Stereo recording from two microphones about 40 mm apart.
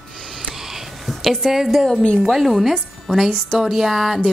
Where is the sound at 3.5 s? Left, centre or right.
Centre.